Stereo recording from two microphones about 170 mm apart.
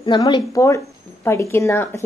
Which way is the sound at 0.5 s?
20° left (ahead or behind).